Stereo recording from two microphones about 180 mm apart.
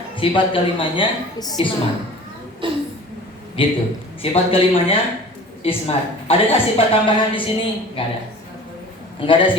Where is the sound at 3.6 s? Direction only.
30° left (ahead or behind).